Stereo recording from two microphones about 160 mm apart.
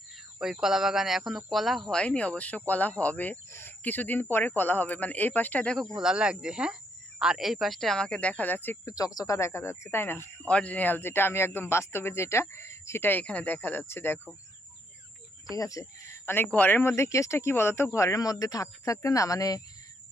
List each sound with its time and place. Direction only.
0.3 s speech: 5° right (ahead or behind)
6.0 s speech: 5° right (ahead or behind); by 14.2 s 15° left (ahead or behind)
15.5 s speech: 20° left (ahead or behind)